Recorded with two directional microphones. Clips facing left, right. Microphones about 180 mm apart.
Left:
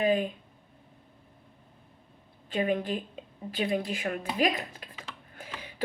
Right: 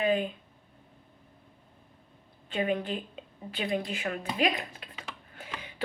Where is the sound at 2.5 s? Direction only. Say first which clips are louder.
Left 1 dB; 40° left (ahead or behind).